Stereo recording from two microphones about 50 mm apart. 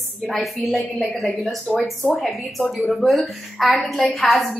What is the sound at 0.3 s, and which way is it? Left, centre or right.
A woman's voice, centre.